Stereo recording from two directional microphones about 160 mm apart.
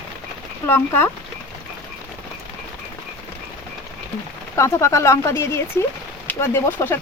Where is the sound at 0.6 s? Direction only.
15° left (ahead or behind).